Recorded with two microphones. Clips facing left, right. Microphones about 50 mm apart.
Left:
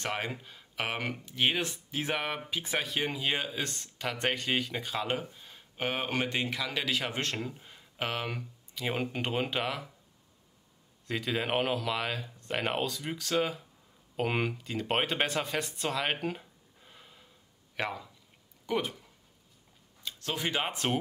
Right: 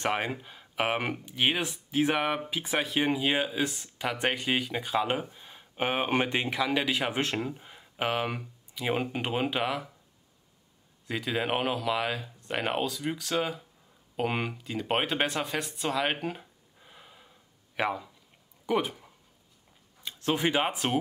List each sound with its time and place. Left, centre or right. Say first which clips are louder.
0.0 s speech: right 5 dB; centre
11.1 s a man's voice: right 2 dB; centre; by 20.6 s right
20.6 s speech: right 3 dB; centre